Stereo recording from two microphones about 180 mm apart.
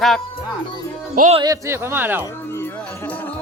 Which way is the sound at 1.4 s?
15° right (ahead or behind).